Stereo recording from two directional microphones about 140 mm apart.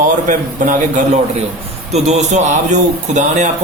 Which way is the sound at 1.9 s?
50° right (ahead or behind).